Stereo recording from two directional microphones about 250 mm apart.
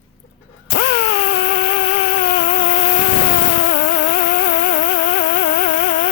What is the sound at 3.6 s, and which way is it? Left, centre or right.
Music, left.